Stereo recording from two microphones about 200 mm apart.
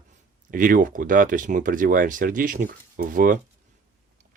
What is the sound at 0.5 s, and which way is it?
Speech, 40° right (ahead or behind).